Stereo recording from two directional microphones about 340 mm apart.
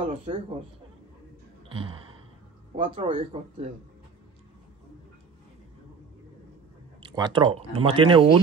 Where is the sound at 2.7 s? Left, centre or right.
Centre.